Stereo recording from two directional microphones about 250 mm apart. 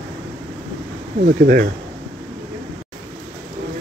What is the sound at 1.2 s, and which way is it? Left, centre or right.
Speech, right.